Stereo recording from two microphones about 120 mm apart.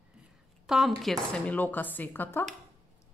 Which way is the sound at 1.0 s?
5° left (ahead or behind).